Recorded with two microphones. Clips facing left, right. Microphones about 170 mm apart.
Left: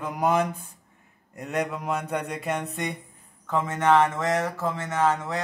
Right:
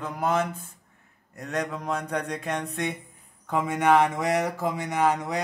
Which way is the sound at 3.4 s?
10° right (ahead or behind).